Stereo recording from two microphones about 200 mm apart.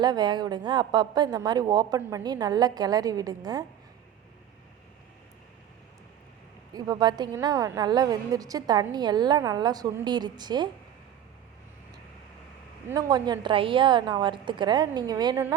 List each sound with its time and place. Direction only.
0.0 s a woman's voice: 20° right (ahead or behind)
6.7 s a woman's voice: 20° right (ahead or behind)
12.9 s a woman's voice: 20° right (ahead or behind)